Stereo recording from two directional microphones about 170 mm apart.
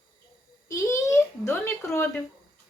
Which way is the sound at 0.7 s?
15° left (ahead or behind).